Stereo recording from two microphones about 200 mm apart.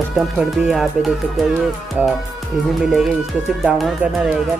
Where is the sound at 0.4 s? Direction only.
Centre (ahead or behind).